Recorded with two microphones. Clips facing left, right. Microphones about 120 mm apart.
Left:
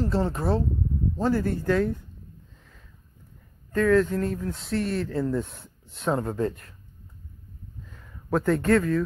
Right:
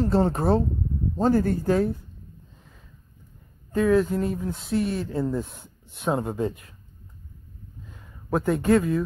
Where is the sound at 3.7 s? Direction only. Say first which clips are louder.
Even; 15° right (ahead or behind).